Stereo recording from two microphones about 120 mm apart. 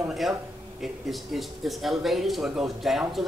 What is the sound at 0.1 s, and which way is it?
Speech, centre (ahead or behind).